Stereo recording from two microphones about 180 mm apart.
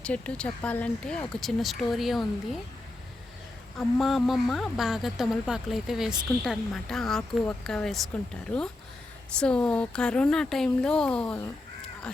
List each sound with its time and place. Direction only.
0.0 s speech: 5° left (ahead or behind)
3.8 s speech: centre (ahead or behind)